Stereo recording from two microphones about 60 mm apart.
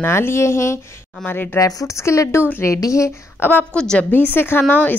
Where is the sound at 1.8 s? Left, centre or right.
Left.